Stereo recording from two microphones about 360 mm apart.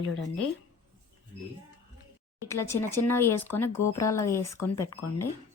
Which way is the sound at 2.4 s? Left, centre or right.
Centre.